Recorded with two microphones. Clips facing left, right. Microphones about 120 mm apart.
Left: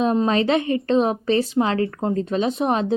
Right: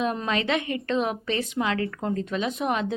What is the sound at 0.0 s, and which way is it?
A woman's voice, 30° left (ahead or behind).